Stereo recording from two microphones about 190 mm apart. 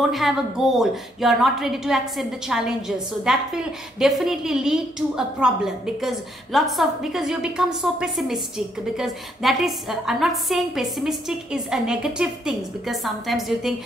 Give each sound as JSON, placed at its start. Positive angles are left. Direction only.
{"t": 0.1, "sound": "a woman's voice", "side_deg": 0}